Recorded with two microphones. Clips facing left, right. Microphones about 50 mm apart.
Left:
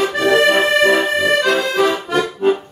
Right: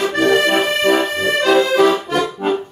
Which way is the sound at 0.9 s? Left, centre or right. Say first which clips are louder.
Left 2 dB; centre.